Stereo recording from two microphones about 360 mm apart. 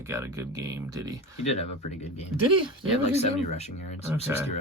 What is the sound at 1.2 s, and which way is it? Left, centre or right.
Speech, centre.